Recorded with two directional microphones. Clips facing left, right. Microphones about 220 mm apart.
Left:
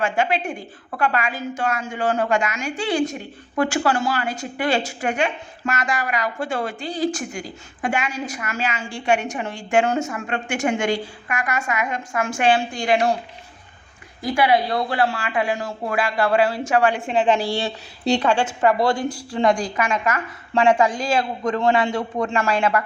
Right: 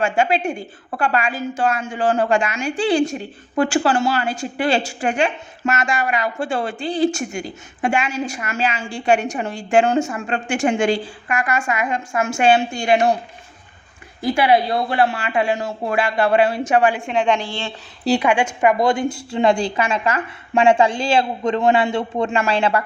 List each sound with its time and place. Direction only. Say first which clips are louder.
0.0 s a woman's voice: right 3 dB; 25° right (ahead or behind)
14.2 s a woman's voice: right 2 dB; 25° right (ahead or behind)
16.9 s a woman's voice: even; centre (ahead or behind)
18.0 s a woman's voice: right 2 dB; 5° right (ahead or behind)
18.3 s a woman's voice: right 1 dB; 15° right (ahead or behind); by 22.8 s 30° right (ahead or behind)